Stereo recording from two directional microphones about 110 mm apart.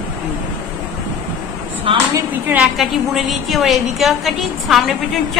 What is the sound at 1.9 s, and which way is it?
Speech, 55° right (ahead or behind).